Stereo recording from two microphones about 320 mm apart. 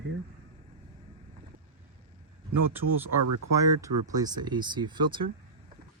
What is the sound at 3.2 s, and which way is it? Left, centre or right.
Speech, right.